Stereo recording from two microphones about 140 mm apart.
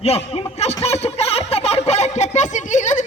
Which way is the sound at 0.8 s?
50° left (ahead or behind).